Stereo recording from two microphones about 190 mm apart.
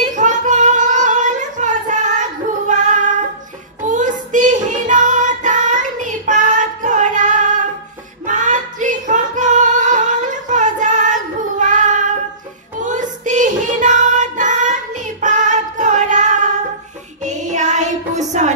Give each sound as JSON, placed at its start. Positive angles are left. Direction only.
{"t": 0.0, "sound": "female singing", "side_deg": -40}
{"t": 2.7, "sound": "child singing", "side_deg": -40}
{"t": 8.3, "sound": "female singing", "side_deg": -40}
{"t": 11.6, "sound": "child singing", "side_deg": -40}
{"t": 12.8, "sound": "music", "side_deg": -40}